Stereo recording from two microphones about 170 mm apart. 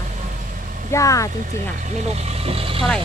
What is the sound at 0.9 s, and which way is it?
Speech, 20° left (ahead or behind).